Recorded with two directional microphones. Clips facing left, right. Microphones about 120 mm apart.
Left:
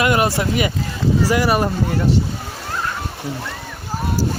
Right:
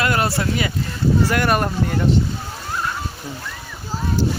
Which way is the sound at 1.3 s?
5° left (ahead or behind).